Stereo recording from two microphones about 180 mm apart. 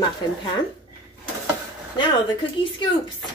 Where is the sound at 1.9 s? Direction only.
25° left (ahead or behind).